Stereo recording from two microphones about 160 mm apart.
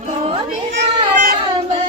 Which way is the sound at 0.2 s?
40° right (ahead or behind).